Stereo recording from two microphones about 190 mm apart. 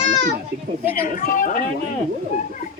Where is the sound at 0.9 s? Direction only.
50° left (ahead or behind).